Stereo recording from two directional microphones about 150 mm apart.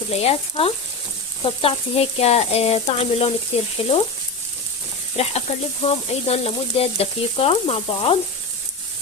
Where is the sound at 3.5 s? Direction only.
40° left (ahead or behind).